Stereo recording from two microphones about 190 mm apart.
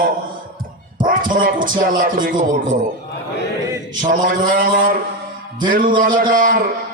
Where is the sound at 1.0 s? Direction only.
45° right (ahead or behind).